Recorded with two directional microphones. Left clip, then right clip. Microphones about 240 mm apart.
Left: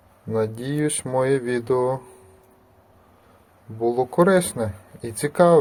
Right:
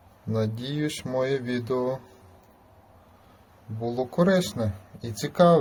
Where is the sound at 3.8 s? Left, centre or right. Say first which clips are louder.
Left 7 dB; centre.